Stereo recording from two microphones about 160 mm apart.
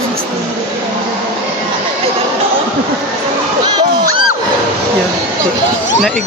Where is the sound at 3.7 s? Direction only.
25° right (ahead or behind).